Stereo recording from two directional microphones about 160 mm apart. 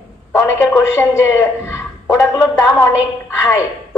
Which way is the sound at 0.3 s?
15° left (ahead or behind).